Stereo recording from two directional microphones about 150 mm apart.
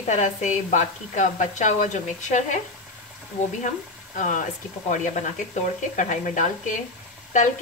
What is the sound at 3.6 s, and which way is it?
A woman's voice, 55° left (ahead or behind).